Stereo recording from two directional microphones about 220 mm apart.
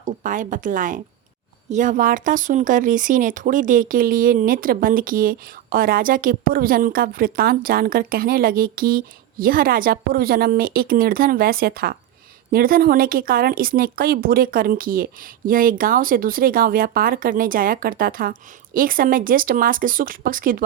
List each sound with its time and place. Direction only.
0.0 s speech: 35° right (ahead or behind)